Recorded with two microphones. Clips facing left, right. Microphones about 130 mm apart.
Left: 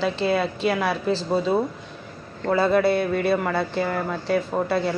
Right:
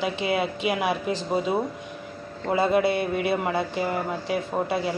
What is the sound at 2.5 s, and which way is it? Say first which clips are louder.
Speech: left 2 dB; 15° right (ahead or behind).